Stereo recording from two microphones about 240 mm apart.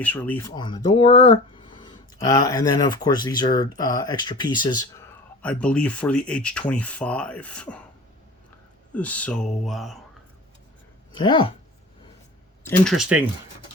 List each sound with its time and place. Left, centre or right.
0.0 s speech: centre
5.4 s speech: centre
8.9 s speech: centre
11.1 s a woman's voice: centre
12.6 s speech: centre